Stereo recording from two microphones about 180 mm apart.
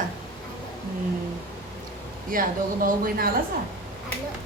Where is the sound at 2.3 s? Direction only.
50° right (ahead or behind).